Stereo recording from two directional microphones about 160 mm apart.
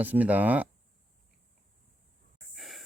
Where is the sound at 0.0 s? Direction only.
10° right (ahead or behind).